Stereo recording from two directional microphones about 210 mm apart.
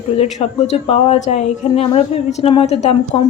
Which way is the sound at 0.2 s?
30° left (ahead or behind).